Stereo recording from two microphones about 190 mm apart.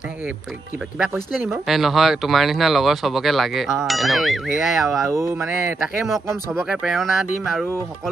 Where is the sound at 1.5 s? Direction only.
Centre (ahead or behind).